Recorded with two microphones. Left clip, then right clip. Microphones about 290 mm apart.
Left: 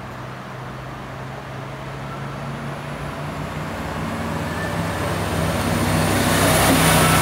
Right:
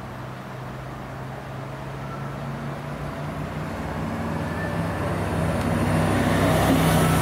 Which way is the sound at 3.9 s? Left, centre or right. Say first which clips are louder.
Left 3 dB; centre.